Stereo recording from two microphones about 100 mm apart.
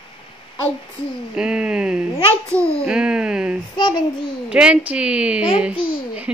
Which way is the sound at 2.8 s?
10° right (ahead or behind).